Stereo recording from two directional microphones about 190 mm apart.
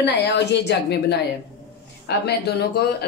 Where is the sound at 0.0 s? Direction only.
60° left (ahead or behind).